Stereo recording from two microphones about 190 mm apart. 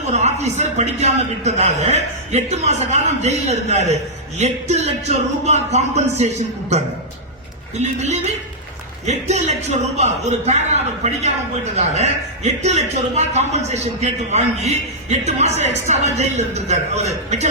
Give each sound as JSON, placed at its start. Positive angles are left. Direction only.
{"t": 0.1, "sound": "a man's voice", "side_deg": -35}